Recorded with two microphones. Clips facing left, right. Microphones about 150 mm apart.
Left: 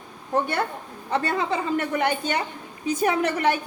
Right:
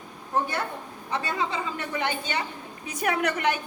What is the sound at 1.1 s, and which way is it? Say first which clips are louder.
A woman's voice: left 5 dB; 55° left (ahead or behind).